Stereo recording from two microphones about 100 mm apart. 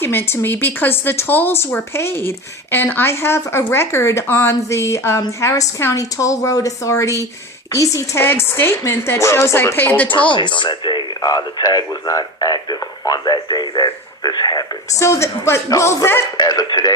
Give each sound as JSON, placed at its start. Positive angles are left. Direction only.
{"t": 0.0, "sound": "a woman's voice", "side_deg": 20}
{"t": 10.3, "sound": "speech", "side_deg": 50}
{"t": 15.0, "sound": "speech", "side_deg": 30}
{"t": 16.4, "sound": "a woman's voice", "side_deg": 40}